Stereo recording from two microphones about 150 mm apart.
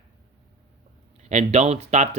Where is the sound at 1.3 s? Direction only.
50° right (ahead or behind).